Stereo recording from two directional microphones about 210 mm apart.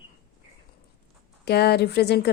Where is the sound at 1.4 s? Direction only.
50° left (ahead or behind).